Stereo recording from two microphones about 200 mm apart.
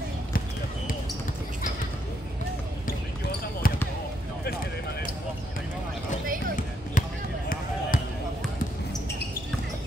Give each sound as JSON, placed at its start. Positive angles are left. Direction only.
{"t": 3.6, "sound": "basketball bounce", "side_deg": 45}
{"t": 6.9, "sound": "basketball bounce", "side_deg": 40}